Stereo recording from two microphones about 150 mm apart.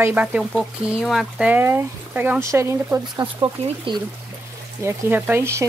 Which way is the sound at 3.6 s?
35° right (ahead or behind).